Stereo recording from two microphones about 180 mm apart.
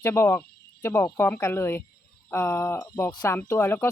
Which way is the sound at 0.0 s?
15° left (ahead or behind).